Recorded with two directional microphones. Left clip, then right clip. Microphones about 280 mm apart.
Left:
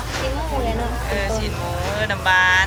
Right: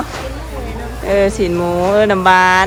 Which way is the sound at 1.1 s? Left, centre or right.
Centre.